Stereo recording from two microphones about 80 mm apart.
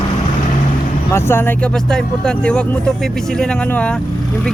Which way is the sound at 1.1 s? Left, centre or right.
Left.